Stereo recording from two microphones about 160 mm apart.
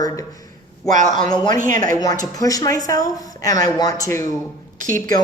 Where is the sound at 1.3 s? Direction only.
25° left (ahead or behind).